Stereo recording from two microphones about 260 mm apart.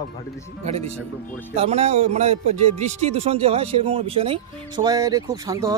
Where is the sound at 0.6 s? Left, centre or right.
Right.